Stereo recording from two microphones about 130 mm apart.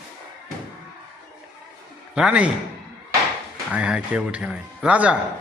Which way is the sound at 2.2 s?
10° right (ahead or behind).